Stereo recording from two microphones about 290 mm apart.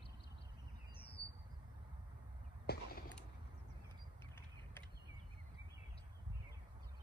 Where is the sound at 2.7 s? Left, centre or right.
Left.